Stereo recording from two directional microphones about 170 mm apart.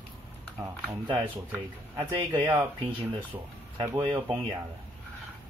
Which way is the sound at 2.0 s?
10° right (ahead or behind).